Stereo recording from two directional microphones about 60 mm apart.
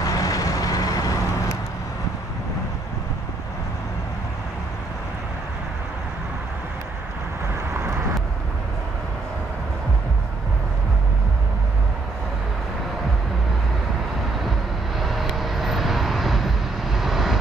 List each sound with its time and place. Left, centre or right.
0.0 s vehicle: left
15.0 s vehicle: centre